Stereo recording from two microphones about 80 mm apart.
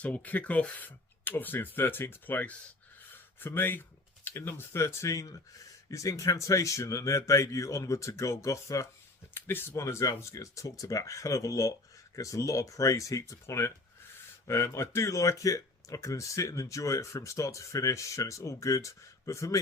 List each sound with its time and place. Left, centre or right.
0.0 s speech: centre; by 8.9 s left
9.3 s speech: left
9.7 s speech: left